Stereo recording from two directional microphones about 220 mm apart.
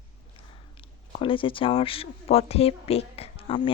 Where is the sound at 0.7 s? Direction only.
25° left (ahead or behind).